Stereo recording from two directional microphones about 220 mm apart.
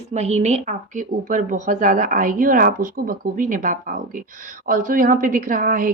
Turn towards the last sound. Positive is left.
turn(degrees=-35)  # may be behind; listen again after turning